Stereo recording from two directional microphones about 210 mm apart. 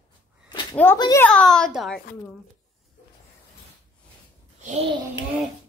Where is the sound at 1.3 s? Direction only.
5° left (ahead or behind).